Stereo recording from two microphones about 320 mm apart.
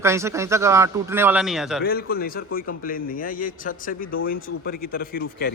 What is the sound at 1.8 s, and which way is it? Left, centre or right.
A man's voice, left.